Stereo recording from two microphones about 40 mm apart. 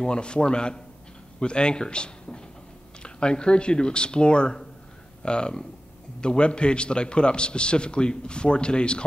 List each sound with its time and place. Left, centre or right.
0.0 s a man's voice: left